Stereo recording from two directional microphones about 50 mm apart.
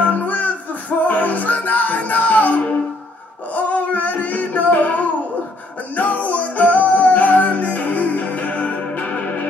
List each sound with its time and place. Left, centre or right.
0.0 s music: left